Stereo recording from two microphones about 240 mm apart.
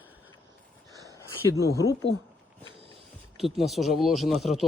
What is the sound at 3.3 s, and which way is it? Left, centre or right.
Speech, centre.